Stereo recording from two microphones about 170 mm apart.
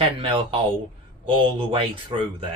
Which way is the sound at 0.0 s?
30° right (ahead or behind).